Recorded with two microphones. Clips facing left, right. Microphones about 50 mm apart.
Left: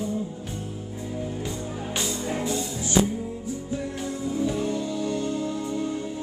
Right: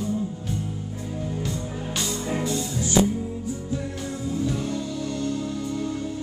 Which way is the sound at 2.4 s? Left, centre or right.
Centre.